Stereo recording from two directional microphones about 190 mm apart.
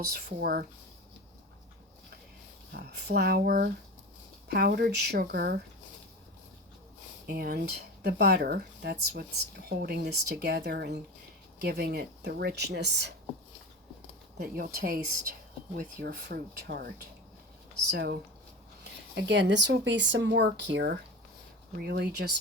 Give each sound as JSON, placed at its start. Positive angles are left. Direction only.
{"t": 0.1, "sound": "speech", "side_deg": -55}
{"t": 2.7, "sound": "speech", "side_deg": -60}
{"t": 7.3, "sound": "speech", "side_deg": -55}
{"t": 14.3, "sound": "speech", "side_deg": -50}
{"t": 17.9, "sound": "speech", "side_deg": -55}